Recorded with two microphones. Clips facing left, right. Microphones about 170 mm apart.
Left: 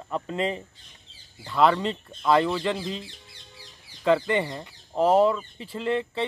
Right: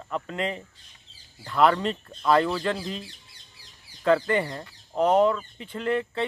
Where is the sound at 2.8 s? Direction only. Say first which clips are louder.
Left 1 dB; 25° left (ahead or behind).